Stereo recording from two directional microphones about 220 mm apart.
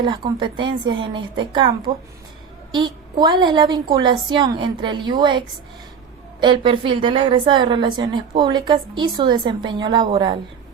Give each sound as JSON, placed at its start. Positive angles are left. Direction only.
{"t": 0.0, "sound": "a woman's voice", "side_deg": -20}
{"t": 6.4, "sound": "a woman's voice", "side_deg": -20}